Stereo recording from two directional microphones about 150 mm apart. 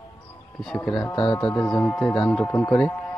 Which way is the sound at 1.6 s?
5° left (ahead or behind).